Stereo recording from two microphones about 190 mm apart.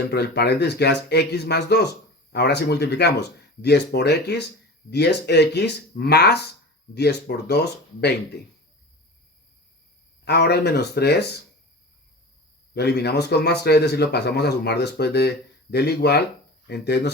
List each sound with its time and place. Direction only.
0.1 s speech: 60° left (ahead or behind)
10.2 s speech: 60° left (ahead or behind)
12.7 s speech: 60° left (ahead or behind)